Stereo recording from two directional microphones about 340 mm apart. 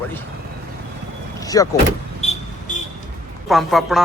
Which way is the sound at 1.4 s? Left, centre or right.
Centre.